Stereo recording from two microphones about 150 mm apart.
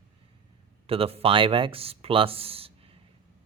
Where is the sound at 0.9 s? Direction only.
40° right (ahead or behind).